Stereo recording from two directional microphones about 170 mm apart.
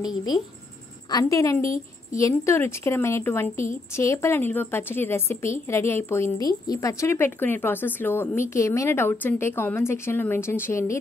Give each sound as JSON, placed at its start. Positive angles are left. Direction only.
{"t": 0.0, "sound": "a woman's voice", "side_deg": 25}